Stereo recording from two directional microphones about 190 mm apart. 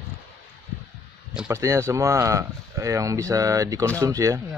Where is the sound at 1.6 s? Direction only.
15° right (ahead or behind).